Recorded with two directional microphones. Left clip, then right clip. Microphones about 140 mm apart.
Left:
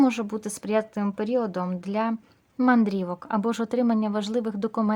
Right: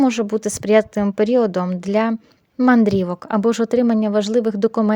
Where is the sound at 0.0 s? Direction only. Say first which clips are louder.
Right 6 dB; 35° right (ahead or behind).